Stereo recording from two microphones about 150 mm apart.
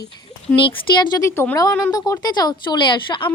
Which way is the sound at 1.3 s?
15° left (ahead or behind).